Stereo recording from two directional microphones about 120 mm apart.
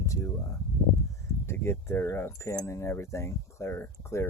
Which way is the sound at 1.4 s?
20° left (ahead or behind).